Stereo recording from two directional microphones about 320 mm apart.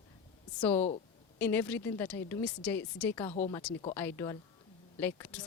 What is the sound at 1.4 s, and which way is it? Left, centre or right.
Speech, centre.